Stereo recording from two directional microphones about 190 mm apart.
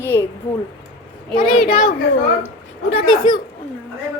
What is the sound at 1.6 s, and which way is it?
Speech, 50° left (ahead or behind).